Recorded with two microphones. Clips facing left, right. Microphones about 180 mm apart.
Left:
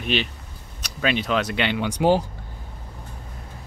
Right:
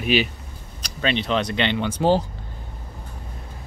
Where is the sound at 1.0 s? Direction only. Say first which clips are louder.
Even; 5° left (ahead or behind).